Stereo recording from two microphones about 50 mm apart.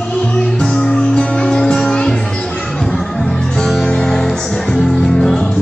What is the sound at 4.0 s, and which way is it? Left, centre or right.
Music, centre.